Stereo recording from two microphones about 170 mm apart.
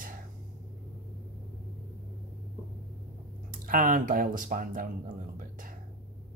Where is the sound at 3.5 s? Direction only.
55° right (ahead or behind).